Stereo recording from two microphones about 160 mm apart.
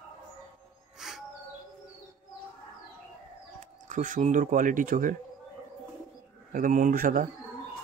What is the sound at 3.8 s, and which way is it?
Speech, 55° right (ahead or behind).